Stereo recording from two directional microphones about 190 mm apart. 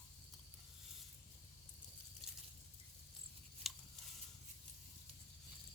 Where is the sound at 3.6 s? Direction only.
Centre (ahead or behind).